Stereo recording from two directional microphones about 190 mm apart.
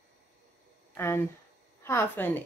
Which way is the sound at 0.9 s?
15° left (ahead or behind).